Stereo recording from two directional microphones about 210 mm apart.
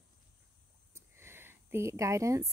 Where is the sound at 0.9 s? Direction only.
10° right (ahead or behind).